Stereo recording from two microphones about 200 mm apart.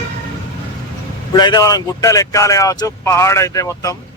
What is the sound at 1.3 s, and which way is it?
Speech, 20° left (ahead or behind).